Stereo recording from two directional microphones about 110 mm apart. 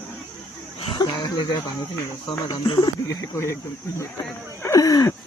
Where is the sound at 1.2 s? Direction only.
35° left (ahead or behind).